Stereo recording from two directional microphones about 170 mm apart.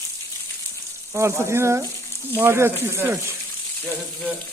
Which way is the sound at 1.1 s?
15° right (ahead or behind).